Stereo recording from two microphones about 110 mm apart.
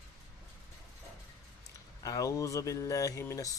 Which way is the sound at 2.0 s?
30° left (ahead or behind).